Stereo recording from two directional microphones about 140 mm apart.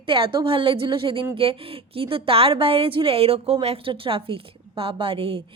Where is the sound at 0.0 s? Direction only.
40° right (ahead or behind).